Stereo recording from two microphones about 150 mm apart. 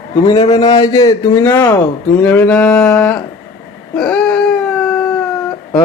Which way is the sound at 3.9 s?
5° left (ahead or behind).